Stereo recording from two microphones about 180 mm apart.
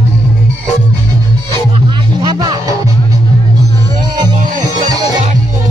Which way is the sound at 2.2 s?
20° right (ahead or behind).